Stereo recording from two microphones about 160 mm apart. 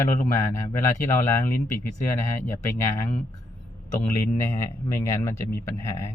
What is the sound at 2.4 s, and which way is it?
Speech, 15° left (ahead or behind).